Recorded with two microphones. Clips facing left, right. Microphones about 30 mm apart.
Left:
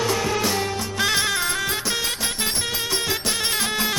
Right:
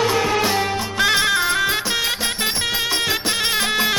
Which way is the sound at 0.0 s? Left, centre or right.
Right.